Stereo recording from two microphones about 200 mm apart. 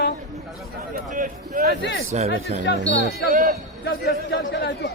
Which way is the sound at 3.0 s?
40° right (ahead or behind).